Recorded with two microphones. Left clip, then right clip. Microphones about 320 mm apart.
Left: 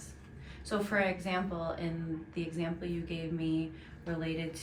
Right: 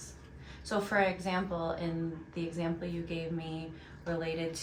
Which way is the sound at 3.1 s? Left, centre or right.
Right.